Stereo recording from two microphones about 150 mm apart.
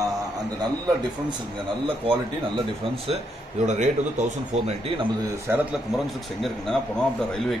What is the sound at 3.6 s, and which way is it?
A man's voice, 50° right (ahead or behind).